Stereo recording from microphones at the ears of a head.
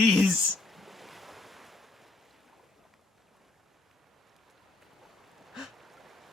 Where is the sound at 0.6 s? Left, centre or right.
Centre.